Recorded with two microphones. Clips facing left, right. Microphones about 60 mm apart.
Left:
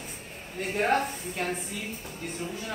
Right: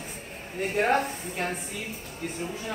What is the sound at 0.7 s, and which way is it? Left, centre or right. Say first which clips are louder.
Speech: right 1 dB; centre.